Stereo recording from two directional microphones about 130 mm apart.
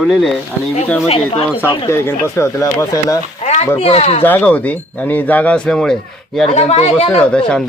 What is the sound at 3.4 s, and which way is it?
Speech, 55° left (ahead or behind).